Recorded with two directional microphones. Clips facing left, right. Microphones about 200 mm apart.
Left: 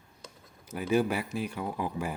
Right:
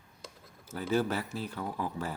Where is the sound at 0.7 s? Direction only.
15° left (ahead or behind).